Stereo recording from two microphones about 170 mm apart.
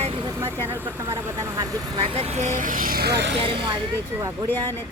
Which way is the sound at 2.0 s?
35° right (ahead or behind).